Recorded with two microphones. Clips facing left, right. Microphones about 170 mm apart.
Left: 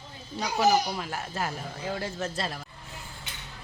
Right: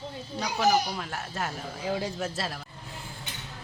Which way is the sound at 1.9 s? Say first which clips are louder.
Right 2 dB; 15° right (ahead or behind).